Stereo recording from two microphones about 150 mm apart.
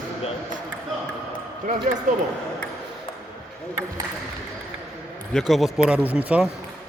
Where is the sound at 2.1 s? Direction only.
60° right (ahead or behind).